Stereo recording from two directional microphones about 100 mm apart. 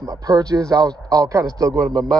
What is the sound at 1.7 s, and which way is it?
Speech, 5° left (ahead or behind).